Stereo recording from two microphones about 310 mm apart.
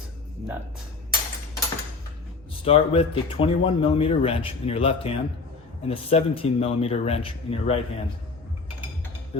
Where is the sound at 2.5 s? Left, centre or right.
Centre.